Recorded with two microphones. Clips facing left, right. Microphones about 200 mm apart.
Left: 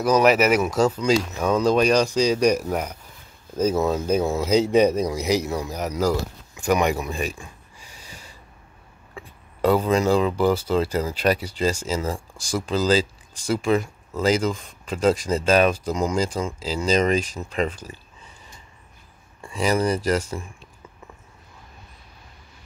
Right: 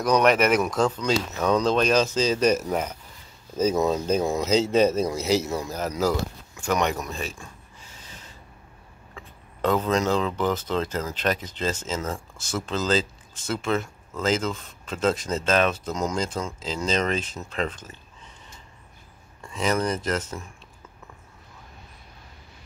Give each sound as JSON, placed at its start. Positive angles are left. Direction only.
{"t": 0.0, "sound": "speech", "side_deg": 5}
{"t": 7.4, "sound": "snort", "side_deg": 15}
{"t": 9.1, "sound": "speech", "side_deg": 10}
{"t": 19.4, "sound": "speech", "side_deg": 10}